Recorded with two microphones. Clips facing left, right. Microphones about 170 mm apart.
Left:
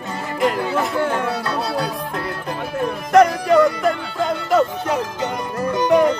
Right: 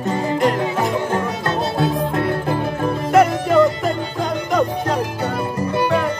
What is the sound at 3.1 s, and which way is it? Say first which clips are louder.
Music: left 2 dB; 5° right (ahead or behind).